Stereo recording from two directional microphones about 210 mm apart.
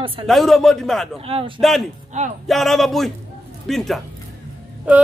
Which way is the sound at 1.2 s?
25° right (ahead or behind).